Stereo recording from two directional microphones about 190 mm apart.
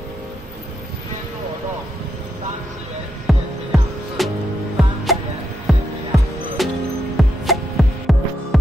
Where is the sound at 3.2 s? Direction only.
Centre (ahead or behind).